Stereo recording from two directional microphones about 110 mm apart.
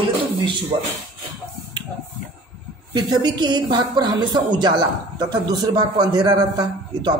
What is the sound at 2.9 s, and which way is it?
A man's voice, 40° right (ahead or behind).